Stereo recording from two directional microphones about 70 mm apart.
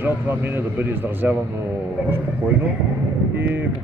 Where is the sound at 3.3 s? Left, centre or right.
Right.